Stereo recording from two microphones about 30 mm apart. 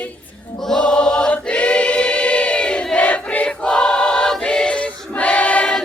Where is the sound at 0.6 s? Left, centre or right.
Left.